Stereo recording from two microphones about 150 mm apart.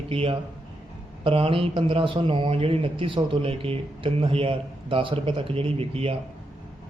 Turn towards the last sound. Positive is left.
turn(degrees=-40)  # may be behind; listen again after turning